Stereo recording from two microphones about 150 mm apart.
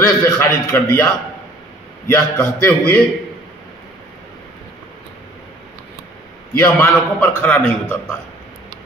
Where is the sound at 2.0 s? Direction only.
15° left (ahead or behind).